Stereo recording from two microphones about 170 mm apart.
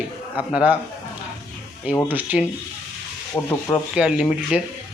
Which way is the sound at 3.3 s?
15° left (ahead or behind).